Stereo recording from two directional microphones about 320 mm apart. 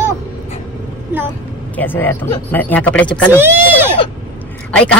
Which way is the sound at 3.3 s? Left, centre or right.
Centre.